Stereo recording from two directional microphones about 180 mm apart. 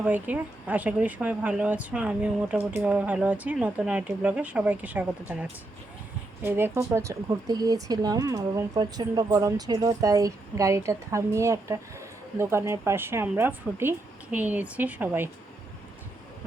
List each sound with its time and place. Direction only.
0.0 s speech: 10° right (ahead or behind)